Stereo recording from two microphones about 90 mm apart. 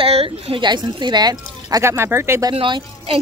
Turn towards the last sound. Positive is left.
turn(degrees=-75)  # may be behind; listen again after turning